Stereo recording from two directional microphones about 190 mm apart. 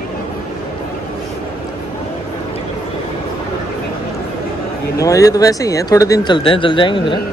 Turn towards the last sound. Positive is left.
turn(degrees=25)  # may be behind; listen again after turning